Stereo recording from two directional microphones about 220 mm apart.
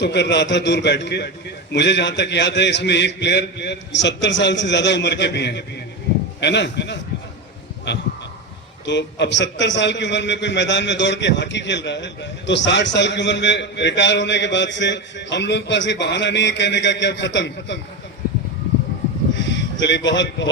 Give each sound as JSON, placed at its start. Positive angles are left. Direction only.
{"t": 0.0, "sound": "a man's voice", "side_deg": 50}
{"t": 8.9, "sound": "a man's voice", "side_deg": 50}
{"t": 19.3, "sound": "a sound", "side_deg": 55}